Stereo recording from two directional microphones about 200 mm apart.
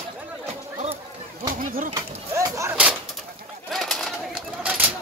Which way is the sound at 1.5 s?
45° right (ahead or behind).